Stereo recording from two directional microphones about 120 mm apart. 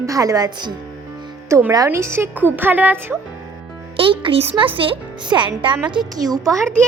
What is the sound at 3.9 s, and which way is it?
Speech, 45° right (ahead or behind).